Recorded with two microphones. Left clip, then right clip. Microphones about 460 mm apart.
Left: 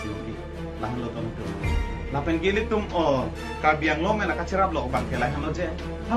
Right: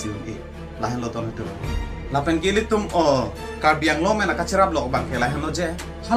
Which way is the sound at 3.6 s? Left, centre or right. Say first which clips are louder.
Right 3 dB; left.